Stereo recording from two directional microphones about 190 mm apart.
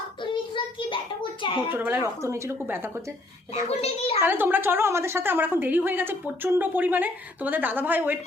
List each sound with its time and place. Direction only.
0.2 s a sound: 25° left (ahead or behind)
1.7 s a woman's voice: 10° right (ahead or behind)
3.5 s a child's voice: 30° left (ahead or behind)
4.2 s a woman's voice: 10° right (ahead or behind)